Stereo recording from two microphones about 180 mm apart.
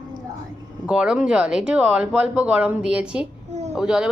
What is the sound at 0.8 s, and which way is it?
Speech, 5° right (ahead or behind).